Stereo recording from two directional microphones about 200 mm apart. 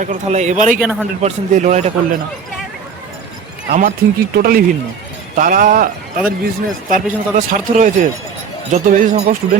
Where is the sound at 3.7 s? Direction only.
40° right (ahead or behind).